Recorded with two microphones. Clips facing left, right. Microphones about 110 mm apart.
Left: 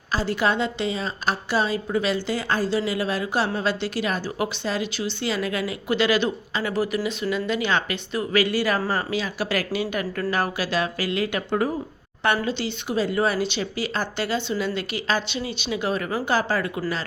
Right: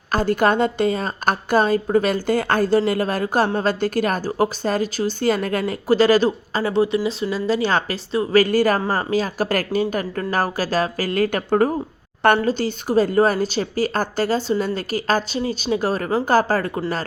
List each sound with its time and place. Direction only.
0.1 s a woman's voice: 50° right (ahead or behind)